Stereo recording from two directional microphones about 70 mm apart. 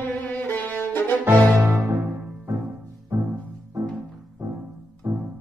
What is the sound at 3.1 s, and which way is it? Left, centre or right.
Music, right.